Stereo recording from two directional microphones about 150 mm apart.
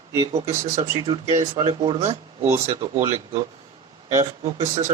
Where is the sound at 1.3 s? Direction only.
40° right (ahead or behind).